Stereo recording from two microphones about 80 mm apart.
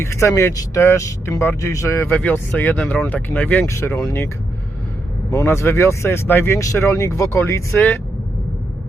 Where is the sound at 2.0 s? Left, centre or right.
Left.